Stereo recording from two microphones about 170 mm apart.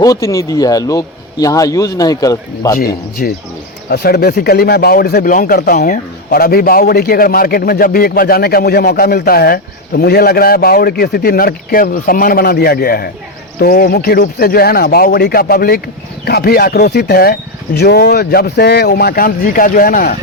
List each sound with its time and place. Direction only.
0.0 s speech: 20° left (ahead or behind)
2.7 s speech: 55° left (ahead or behind)
3.8 s speech: 70° left (ahead or behind)